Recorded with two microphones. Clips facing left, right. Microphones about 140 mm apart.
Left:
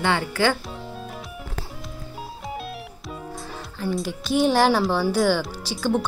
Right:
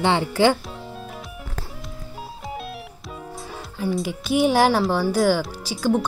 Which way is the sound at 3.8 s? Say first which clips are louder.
Right 2 dB; 5° right (ahead or behind).